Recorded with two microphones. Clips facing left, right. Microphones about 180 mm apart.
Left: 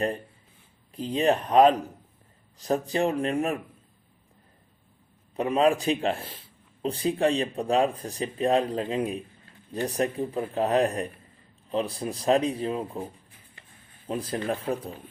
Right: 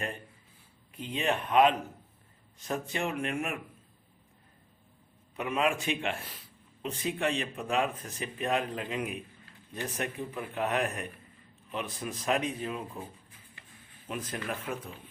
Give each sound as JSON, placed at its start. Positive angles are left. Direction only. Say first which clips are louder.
{"t": 0.9, "sound": "speech", "louder": "left 7 dB", "side_deg": 35}
{"t": 5.4, "sound": "speech", "louder": "left 7 dB", "side_deg": 35}
{"t": 14.1, "sound": "speech", "louder": "left 7 dB", "side_deg": 30}